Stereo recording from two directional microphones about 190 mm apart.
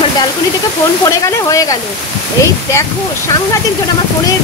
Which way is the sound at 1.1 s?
15° left (ahead or behind).